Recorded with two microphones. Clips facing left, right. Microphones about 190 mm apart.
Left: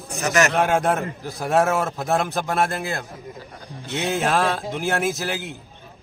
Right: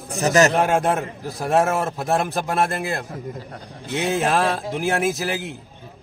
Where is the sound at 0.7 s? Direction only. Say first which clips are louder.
Right 1 dB; centre (ahead or behind).